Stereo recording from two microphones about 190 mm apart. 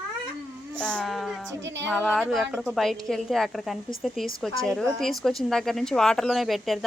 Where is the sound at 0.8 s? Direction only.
5° left (ahead or behind).